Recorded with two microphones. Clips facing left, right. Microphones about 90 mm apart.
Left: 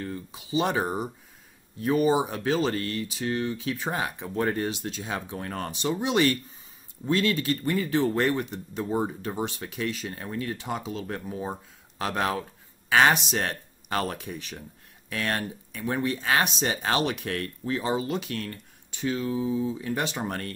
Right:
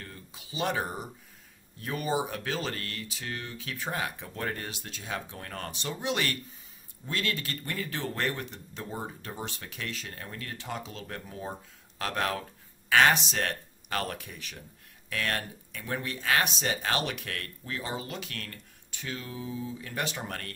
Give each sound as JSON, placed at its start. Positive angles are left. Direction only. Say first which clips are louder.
{"t": 0.0, "sound": "speech", "louder": "left 11 dB", "side_deg": 20}